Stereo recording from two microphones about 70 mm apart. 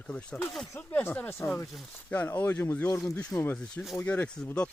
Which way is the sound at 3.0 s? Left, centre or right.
Centre.